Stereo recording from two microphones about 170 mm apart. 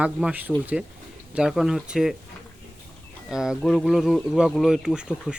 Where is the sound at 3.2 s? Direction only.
5° right (ahead or behind).